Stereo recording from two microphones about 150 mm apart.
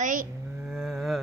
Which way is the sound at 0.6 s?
5° right (ahead or behind).